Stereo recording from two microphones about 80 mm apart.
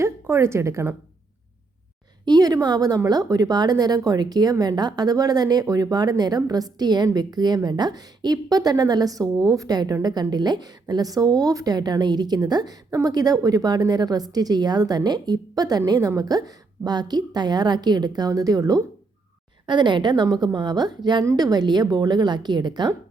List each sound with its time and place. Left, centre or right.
0.0 s a woman's voice: right
2.2 s a woman's voice: right
19.6 s a woman's voice: right